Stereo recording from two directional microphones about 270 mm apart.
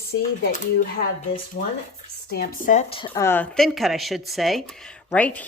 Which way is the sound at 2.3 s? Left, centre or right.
Left.